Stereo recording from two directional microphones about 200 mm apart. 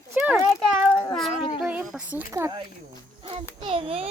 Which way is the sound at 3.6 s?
30° right (ahead or behind).